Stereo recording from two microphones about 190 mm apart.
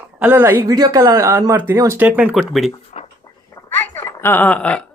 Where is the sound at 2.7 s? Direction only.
35° left (ahead or behind).